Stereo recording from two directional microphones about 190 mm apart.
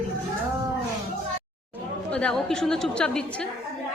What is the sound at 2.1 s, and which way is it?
A woman's voice, 5° left (ahead or behind).